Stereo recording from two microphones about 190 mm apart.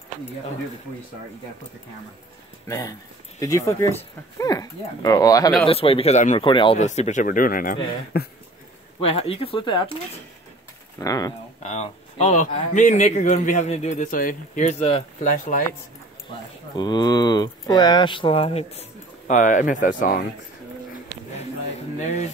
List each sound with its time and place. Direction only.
2.7 s speech: 15° left (ahead or behind)
5.7 s speech: 30° left (ahead or behind)
6.8 s speech: 40° left (ahead or behind); by 8.3 s 55° left (ahead or behind)
9.0 s speech: 30° left (ahead or behind)
11.0 s speech: 20° left (ahead or behind)
11.6 s speech: 35° left (ahead or behind)